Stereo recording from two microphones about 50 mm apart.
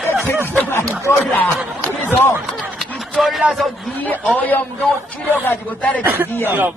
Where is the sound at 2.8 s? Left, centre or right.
Centre.